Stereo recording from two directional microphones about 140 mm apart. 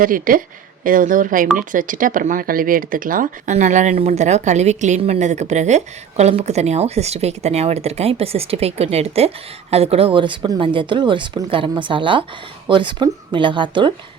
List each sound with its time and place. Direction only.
0.0 s a woman's voice: 85° right
0.9 s speech: 75° right (ahead or behind)
3.5 s a woman's voice: 60° right (ahead or behind); by 13.9 s 35° right (ahead or behind)